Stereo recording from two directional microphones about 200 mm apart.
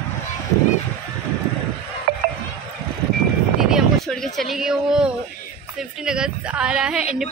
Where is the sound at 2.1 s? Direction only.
50° right (ahead or behind).